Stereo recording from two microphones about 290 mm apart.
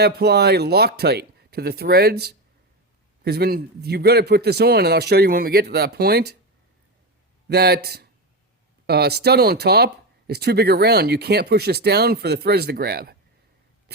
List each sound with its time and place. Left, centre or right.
0.0 s speech: right
7.4 s speech: right